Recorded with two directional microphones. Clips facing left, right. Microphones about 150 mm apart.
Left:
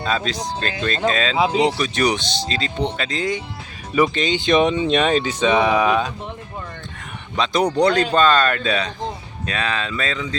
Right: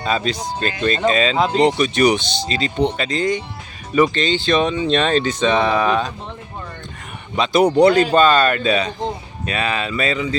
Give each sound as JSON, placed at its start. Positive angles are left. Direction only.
{"t": 0.0, "sound": "speech", "side_deg": -5}
{"t": 7.3, "sound": "speech", "side_deg": -5}